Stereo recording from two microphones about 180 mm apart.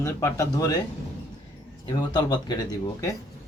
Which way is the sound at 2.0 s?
25° left (ahead or behind).